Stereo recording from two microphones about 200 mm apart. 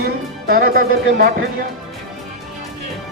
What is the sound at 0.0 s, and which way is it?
Music, 50° right (ahead or behind).